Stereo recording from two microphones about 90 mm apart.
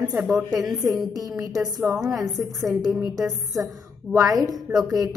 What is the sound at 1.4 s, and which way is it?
Speech, 45° right (ahead or behind).